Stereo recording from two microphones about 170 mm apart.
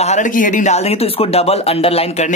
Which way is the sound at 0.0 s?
45° left (ahead or behind).